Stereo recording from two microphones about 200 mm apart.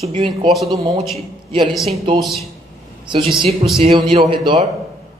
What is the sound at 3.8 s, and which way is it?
Speech, 30° right (ahead or behind).